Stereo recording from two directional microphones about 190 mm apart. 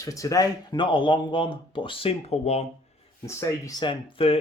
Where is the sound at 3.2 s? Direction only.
15° left (ahead or behind).